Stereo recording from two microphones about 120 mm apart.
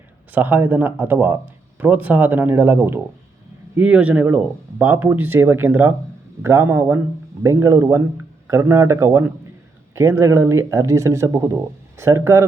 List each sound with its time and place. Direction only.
0.3 s speech: 15° right (ahead or behind)